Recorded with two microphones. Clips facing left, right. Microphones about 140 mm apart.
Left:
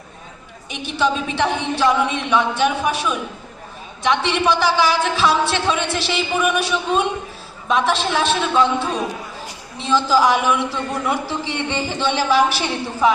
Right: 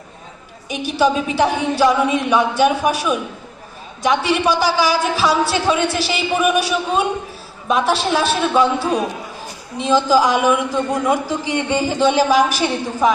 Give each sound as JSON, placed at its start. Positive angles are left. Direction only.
{"t": 0.7, "sound": "a woman's voice", "side_deg": -10}
{"t": 11.9, "sound": "a woman's voice", "side_deg": -40}